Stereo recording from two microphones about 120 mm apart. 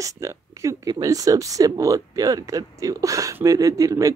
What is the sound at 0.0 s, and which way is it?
Speech, 25° right (ahead or behind).